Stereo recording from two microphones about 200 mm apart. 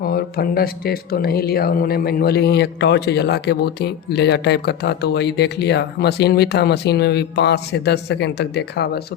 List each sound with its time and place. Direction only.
0.0 s speech: 50° left (ahead or behind)